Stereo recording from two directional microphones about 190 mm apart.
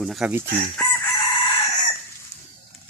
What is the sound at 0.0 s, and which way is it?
Speech, centre (ahead or behind).